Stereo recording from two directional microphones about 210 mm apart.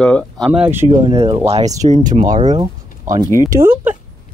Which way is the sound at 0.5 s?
10° right (ahead or behind).